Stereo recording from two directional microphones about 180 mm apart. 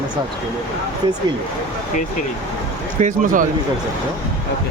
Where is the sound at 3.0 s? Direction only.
50° right (ahead or behind).